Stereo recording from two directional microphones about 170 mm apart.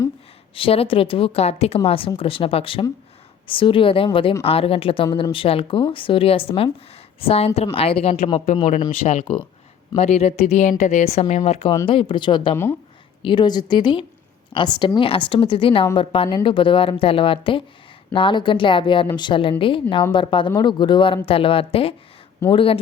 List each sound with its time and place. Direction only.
0.5 s a woman's voice: 35° left (ahead or behind)